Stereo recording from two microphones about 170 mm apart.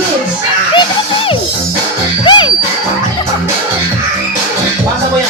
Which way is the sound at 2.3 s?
30° left (ahead or behind).